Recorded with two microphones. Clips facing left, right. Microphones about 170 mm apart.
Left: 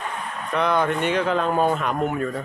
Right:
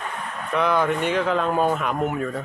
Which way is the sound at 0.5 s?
5° right (ahead or behind).